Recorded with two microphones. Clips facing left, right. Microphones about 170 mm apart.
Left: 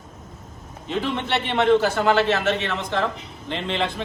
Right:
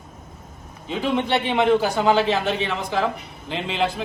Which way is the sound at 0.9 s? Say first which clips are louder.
Right 3 dB; 10° right (ahead or behind).